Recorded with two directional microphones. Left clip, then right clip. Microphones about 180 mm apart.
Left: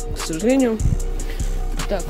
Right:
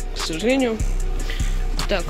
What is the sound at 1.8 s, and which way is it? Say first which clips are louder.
Music: right 1 dB; centre (ahead or behind).